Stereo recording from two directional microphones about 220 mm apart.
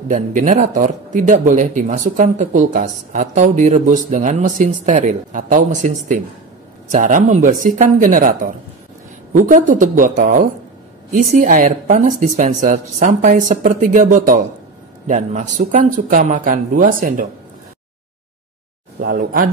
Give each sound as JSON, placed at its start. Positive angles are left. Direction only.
{"t": 0.1, "sound": "speech", "side_deg": -35}
{"t": 18.9, "sound": "speech", "side_deg": -40}